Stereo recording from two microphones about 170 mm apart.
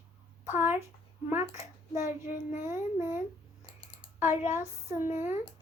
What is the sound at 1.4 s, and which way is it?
A child's voice, 40° left (ahead or behind).